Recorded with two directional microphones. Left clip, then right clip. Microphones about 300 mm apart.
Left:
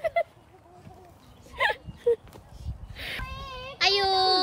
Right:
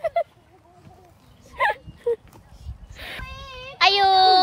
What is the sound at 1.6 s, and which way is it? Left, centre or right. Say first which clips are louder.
Whimper: right 4 dB; centre.